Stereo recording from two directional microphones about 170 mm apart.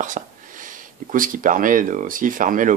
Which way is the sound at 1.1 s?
55° right (ahead or behind).